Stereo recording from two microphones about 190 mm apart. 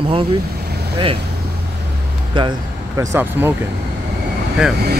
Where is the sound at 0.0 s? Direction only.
30° right (ahead or behind).